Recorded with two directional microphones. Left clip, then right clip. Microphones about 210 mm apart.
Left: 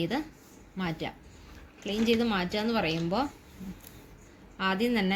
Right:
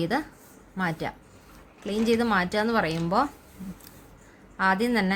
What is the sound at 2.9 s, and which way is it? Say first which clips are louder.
Speech: right 5 dB; 45° right (ahead or behind).